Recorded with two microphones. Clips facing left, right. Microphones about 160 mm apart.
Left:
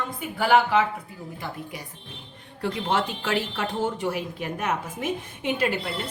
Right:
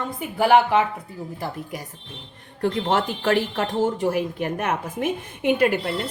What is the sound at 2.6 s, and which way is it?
Speech, 45° right (ahead or behind).